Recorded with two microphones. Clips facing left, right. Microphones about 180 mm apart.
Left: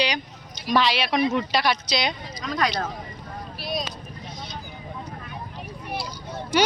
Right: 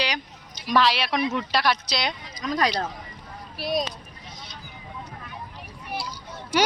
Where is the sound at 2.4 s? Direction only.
35° right (ahead or behind).